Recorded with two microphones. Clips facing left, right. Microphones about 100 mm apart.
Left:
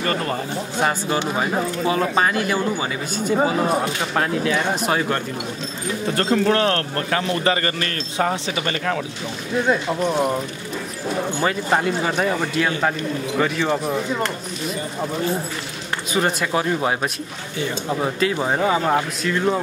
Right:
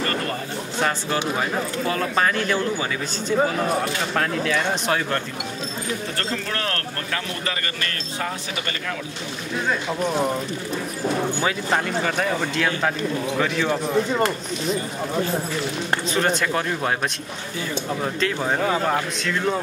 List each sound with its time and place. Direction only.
0.7 s speech: 15° left (ahead or behind)
6.5 s a man's voice: 25° left (ahead or behind)
9.7 s speech: 10° left (ahead or behind)
11.4 s a man's voice: 5° left (ahead or behind)
16.1 s a man's voice: 5° left (ahead or behind)